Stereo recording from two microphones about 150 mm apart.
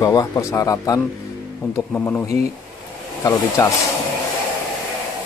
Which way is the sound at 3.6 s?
20° left (ahead or behind).